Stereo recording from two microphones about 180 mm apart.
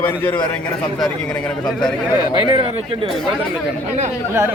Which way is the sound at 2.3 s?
25° right (ahead or behind).